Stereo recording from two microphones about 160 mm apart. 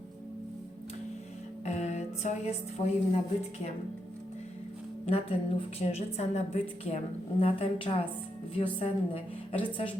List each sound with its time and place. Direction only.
1.6 s a woman's voice: 45° left (ahead or behind)
5.0 s a woman's voice: 40° left (ahead or behind)